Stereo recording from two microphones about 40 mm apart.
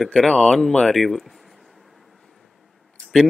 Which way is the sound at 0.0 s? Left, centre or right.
Centre.